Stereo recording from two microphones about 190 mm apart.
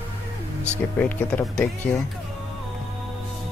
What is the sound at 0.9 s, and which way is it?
Speech, 10° left (ahead or behind).